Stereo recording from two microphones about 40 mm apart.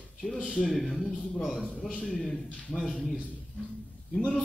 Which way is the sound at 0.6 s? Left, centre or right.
Centre.